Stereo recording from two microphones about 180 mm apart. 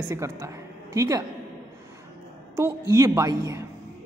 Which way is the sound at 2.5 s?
15° right (ahead or behind).